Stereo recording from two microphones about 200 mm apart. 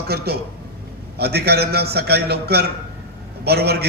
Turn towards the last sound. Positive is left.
turn(degrees=-55)  # may be behind; listen again after turning